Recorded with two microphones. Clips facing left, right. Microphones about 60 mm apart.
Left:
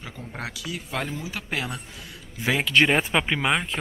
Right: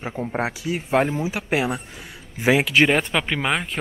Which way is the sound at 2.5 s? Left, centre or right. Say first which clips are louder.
Right 2 dB; centre.